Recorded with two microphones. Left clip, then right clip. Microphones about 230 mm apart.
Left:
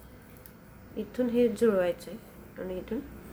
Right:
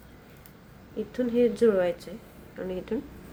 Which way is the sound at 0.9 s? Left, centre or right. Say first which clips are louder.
Right 2 dB; centre.